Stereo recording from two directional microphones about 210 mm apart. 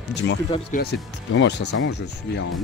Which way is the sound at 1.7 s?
90° left.